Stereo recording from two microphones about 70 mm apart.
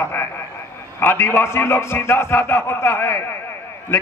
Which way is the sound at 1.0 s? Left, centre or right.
Left.